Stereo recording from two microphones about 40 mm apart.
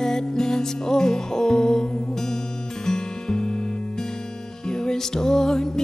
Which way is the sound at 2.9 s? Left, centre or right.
Centre.